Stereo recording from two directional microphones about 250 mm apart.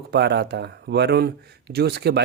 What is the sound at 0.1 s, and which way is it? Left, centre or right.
Speech, right.